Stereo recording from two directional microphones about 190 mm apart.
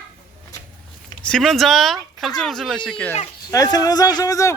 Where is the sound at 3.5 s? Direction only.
20° left (ahead or behind).